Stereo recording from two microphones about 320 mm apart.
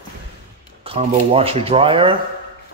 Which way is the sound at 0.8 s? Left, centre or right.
Centre.